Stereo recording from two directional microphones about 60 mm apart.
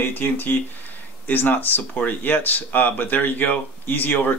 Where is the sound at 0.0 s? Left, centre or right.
Left.